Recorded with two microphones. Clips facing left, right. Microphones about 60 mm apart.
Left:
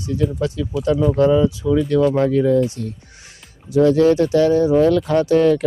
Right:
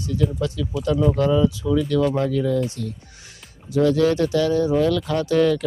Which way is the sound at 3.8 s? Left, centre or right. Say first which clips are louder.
Left 4 dB; left.